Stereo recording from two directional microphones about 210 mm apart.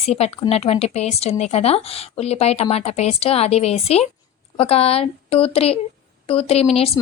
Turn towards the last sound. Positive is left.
turn(degrees=30)  # may be behind; listen again after turning